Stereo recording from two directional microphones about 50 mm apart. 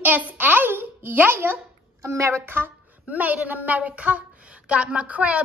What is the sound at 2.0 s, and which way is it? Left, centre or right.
Speech, right.